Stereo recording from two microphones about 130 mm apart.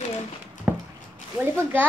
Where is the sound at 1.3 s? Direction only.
15° right (ahead or behind).